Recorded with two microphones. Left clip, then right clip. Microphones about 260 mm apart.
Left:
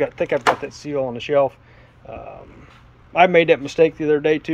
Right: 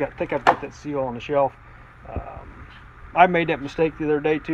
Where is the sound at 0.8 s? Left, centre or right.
Left.